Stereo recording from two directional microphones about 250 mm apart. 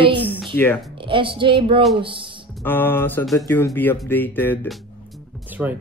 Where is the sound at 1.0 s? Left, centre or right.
Centre.